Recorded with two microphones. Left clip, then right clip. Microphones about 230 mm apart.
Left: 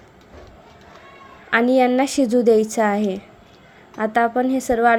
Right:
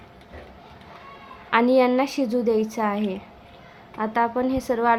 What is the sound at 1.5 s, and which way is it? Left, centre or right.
A woman's voice, centre.